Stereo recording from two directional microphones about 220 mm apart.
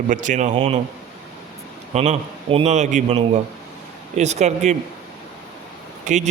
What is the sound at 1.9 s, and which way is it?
Speech, 30° right (ahead or behind).